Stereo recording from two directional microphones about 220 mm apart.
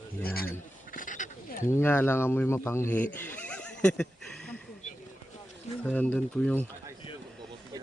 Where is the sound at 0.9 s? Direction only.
35° left (ahead or behind).